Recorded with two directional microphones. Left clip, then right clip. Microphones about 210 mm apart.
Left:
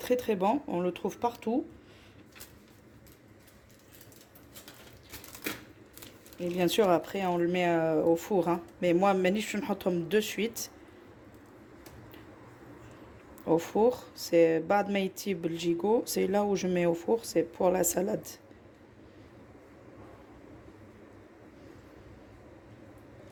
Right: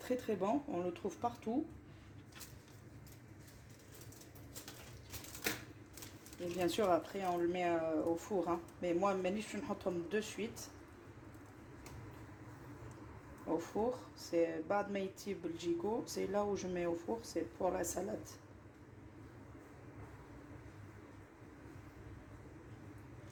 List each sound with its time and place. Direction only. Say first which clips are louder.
0.0 s speech: left 10 dB; 40° left (ahead or behind)
6.6 s speech: left 8 dB; 45° left (ahead or behind)
13.6 s speech: left 12 dB; 50° left (ahead or behind)